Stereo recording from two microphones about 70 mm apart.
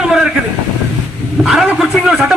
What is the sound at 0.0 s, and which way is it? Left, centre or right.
Vehicle, centre.